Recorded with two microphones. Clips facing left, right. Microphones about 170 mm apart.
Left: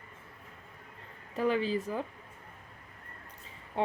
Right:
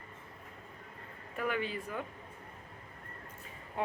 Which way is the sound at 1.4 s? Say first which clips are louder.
Left 6 dB; 30° left (ahead or behind).